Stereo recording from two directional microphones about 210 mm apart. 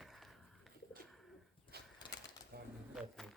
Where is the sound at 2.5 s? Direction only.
50° right (ahead or behind).